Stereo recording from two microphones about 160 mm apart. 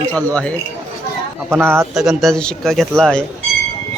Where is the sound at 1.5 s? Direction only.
15° right (ahead or behind).